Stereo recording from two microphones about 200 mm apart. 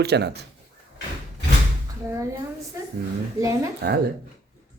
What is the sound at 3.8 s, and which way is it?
Speech, 55° right (ahead or behind).